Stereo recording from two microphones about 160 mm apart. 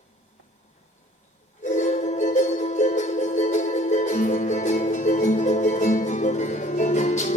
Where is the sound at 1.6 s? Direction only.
50° left (ahead or behind).